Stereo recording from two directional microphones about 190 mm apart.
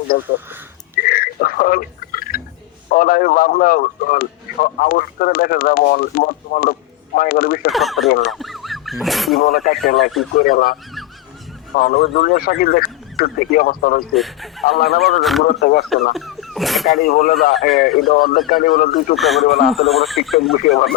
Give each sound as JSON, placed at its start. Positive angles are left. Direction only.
{"t": 0.1, "sound": "speech", "side_deg": 60}
{"t": 1.0, "sound": "a sound", "side_deg": 50}
{"t": 2.9, "sound": "a man's voice", "side_deg": 50}
{"t": 7.7, "sound": "speech", "side_deg": 0}
{"t": 8.0, "sound": "a man's voice", "side_deg": 50}
{"t": 8.3, "sound": "speech", "side_deg": 0}
{"t": 9.4, "sound": "a man's voice", "side_deg": 50}
{"t": 14.1, "sound": "speech", "side_deg": 0}
{"t": 14.6, "sound": "a man's voice", "side_deg": 50}
{"t": 15.2, "sound": "speech", "side_deg": 0}
{"t": 15.4, "sound": "a man's voice", "side_deg": 50}
{"t": 16.1, "sound": "speech", "side_deg": 0}
{"t": 16.9, "sound": "a man's voice", "side_deg": 50}
{"t": 19.1, "sound": "speech", "side_deg": 0}